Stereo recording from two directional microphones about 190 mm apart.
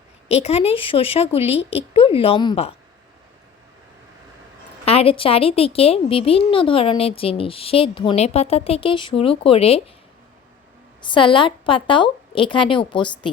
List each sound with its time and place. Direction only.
0.3 s speech: 35° left (ahead or behind)
4.9 s a woman's voice: 30° left (ahead or behind)
11.0 s a woman's voice: 25° left (ahead or behind)